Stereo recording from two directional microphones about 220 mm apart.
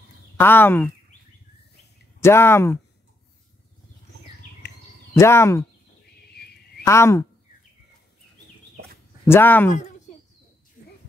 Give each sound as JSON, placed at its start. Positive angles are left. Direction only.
{"t": 0.4, "sound": "speech", "side_deg": 10}
{"t": 2.1, "sound": "speech", "side_deg": 10}
{"t": 5.1, "sound": "speech", "side_deg": 10}
{"t": 6.0, "sound": "a sound", "side_deg": 45}
{"t": 6.8, "sound": "speech", "side_deg": 10}
{"t": 9.2, "sound": "speech", "side_deg": 10}